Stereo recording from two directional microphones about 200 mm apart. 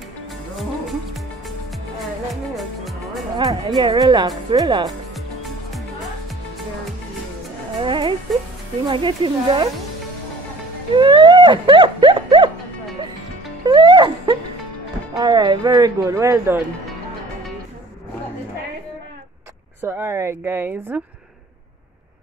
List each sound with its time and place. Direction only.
0.6 s music: centre (ahead or behind)
2.5 s music: centre (ahead or behind)
3.3 s speech: 20° right (ahead or behind)
4.8 s music: centre (ahead or behind)
7.8 s speech: 25° right (ahead or behind)
11.0 s a sound: 25° right (ahead or behind)
13.7 s music: 20° right (ahead or behind)
15.1 s speech: 20° right (ahead or behind)
19.8 s speech: 10° right (ahead or behind)